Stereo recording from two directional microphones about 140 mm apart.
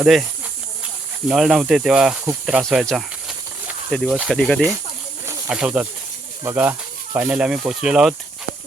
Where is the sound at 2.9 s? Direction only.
5° right (ahead or behind).